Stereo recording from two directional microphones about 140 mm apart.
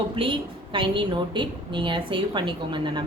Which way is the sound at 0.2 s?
35° right (ahead or behind).